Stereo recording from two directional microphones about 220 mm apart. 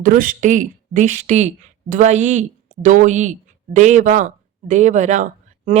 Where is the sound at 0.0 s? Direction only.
40° right (ahead or behind).